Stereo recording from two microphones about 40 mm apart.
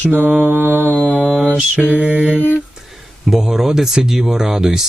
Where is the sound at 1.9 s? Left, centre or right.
Right.